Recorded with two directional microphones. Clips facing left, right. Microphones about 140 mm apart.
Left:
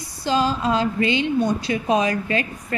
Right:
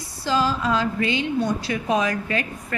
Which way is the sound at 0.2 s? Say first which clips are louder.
Left 2 dB; 20° left (ahead or behind).